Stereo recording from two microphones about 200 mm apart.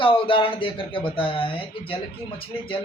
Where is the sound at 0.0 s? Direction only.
25° left (ahead or behind).